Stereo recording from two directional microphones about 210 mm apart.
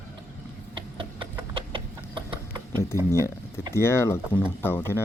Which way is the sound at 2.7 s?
10° left (ahead or behind).